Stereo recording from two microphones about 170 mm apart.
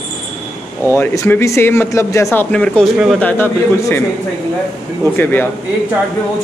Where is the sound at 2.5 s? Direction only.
5° left (ahead or behind).